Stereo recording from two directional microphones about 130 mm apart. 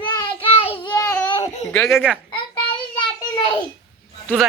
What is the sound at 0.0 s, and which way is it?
Child singing, 35° left (ahead or behind).